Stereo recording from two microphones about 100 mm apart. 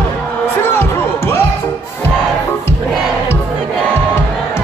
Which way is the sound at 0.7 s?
25° left (ahead or behind).